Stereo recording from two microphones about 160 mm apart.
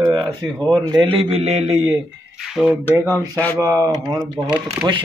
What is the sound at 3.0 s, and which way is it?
Speech, 20° right (ahead or behind).